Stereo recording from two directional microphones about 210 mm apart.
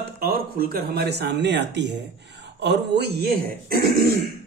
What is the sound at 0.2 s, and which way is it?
Speech, 45° right (ahead or behind).